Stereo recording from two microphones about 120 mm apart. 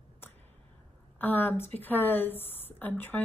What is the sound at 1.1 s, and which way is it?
Speech, 15° left (ahead or behind).